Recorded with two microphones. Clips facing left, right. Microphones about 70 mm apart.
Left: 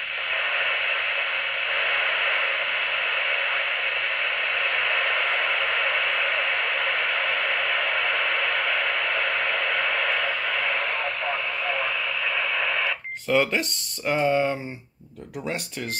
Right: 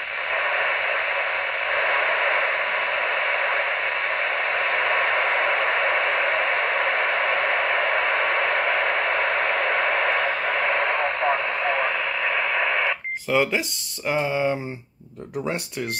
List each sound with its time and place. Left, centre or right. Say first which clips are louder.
0.4 s radio: right 3 dB; right
13.3 s speech: even; centre